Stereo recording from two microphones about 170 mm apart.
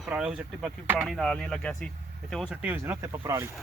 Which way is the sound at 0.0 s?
5° right (ahead or behind).